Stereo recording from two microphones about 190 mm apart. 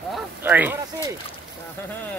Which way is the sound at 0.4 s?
10° right (ahead or behind).